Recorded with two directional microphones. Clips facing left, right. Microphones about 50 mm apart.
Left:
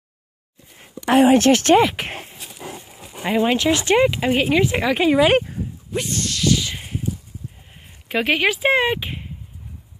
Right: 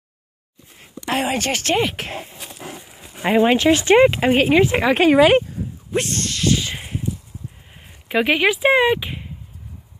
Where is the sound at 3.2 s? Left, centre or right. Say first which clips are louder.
Right 3 dB; right.